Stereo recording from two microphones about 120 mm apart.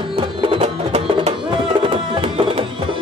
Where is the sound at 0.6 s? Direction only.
65° right (ahead or behind).